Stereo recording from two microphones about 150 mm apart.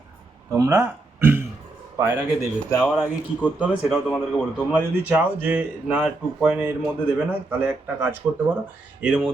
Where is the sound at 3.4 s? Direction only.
5° right (ahead or behind).